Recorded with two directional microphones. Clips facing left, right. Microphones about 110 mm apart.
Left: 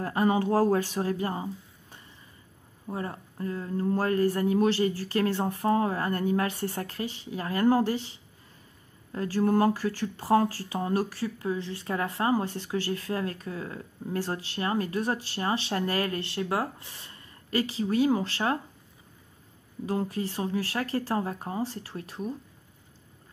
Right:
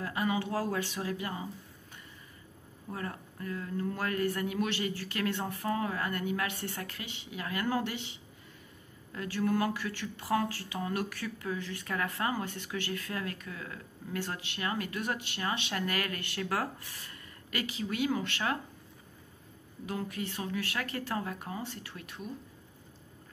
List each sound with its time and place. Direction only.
0.0 s speech: 40° left (ahead or behind)
19.9 s speech: 35° left (ahead or behind)